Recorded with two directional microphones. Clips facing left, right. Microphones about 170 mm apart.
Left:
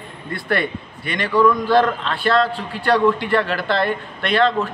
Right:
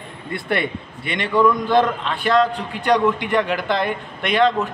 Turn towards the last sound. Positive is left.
turn(degrees=-15)  # may be behind; listen again after turning